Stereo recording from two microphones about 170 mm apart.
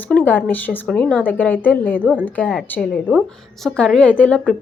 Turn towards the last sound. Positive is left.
turn(degrees=10)  # may be behind; listen again after turning